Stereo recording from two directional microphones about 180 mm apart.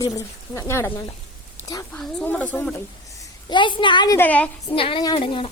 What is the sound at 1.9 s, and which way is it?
Speech, 5° left (ahead or behind).